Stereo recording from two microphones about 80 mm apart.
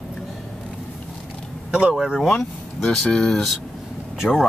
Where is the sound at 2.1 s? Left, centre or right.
Centre.